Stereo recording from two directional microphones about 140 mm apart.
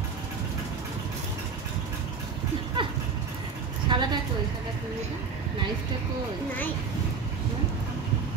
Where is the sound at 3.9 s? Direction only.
35° right (ahead or behind).